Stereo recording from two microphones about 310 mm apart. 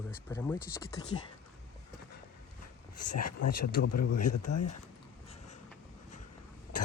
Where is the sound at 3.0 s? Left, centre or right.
Left.